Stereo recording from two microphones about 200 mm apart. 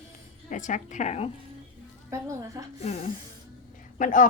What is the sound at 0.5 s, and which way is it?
Speech, 40° left (ahead or behind).